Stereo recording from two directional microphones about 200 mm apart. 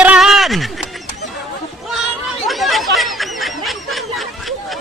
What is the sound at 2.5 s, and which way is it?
Snicker, centre (ahead or behind).